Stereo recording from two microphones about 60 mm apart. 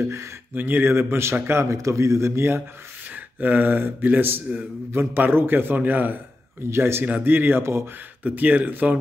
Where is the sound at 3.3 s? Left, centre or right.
Right.